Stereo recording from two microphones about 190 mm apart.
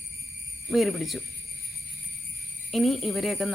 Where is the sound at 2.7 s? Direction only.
Centre (ahead or behind).